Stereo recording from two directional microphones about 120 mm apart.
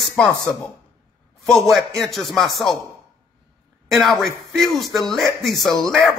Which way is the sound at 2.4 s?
40° left (ahead or behind).